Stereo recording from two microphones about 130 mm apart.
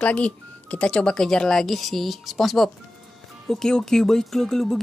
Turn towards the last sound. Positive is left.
turn(degrees=5)  # may be behind; listen again after turning